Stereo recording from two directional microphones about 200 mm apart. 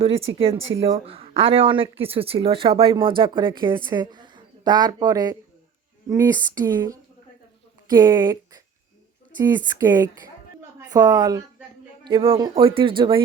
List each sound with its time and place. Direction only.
0.0 s a woman's voice: 30° right (ahead or behind)
9.6 s a woman's voice: 20° right (ahead or behind)